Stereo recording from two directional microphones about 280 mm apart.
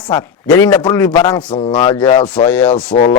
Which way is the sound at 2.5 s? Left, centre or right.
Centre.